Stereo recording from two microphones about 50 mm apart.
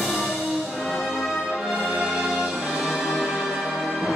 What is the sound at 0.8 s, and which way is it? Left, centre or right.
Brass instrument, centre.